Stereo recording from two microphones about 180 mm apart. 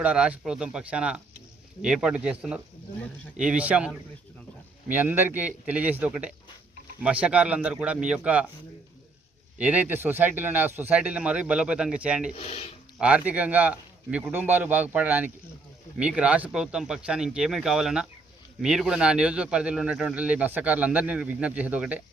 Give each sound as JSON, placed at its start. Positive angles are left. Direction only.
{"t": 0.0, "sound": "a man's voice", "side_deg": -5}
{"t": 9.6, "sound": "a man's voice", "side_deg": -10}
{"t": 12.3, "sound": "speech", "side_deg": 35}
{"t": 13.0, "sound": "a man's voice", "side_deg": -5}